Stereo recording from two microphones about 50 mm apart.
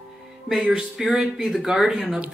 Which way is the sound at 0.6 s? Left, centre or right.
Centre.